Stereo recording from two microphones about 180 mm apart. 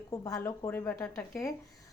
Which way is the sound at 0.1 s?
20° left (ahead or behind).